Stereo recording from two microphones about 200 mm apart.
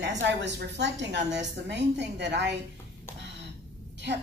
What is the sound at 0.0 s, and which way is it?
A woman's voice, 60° right (ahead or behind).